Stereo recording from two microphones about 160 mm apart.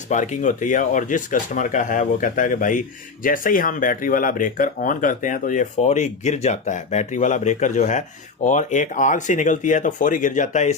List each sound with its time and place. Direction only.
0.1 s speech: 50° left (ahead or behind)